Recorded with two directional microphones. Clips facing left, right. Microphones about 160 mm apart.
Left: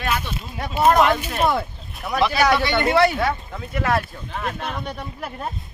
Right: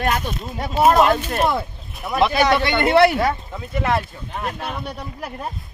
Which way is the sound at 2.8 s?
65° right (ahead or behind).